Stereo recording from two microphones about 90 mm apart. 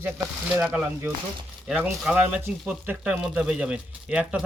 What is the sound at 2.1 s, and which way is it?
Speech, 15° right (ahead or behind).